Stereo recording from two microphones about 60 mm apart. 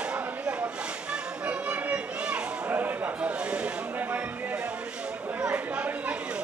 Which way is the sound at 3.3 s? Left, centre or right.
Centre.